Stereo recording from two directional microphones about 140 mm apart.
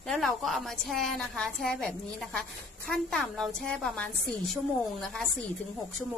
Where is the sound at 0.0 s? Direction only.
5° left (ahead or behind).